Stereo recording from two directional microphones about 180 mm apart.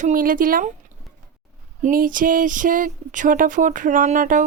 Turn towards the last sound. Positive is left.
turn(degrees=-45)  # may be behind; listen again after turning